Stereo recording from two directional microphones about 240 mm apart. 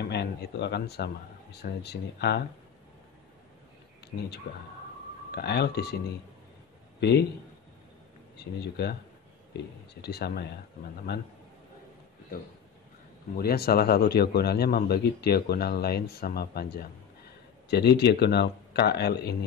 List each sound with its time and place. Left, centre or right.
0.0 s speech: left
4.1 s a man's voice: left
5.3 s speech: left
7.0 s a man's voice: left
8.5 s speech: left
10.0 s a man's voice: left
13.4 s a man's voice: left